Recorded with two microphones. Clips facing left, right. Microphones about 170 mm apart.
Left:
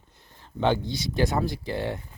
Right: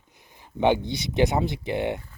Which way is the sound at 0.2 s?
15° right (ahead or behind).